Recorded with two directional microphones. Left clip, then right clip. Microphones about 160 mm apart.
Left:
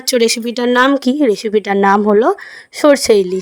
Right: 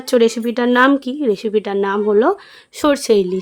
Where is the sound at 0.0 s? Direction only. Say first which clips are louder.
Left 1 dB; 50° left (ahead or behind).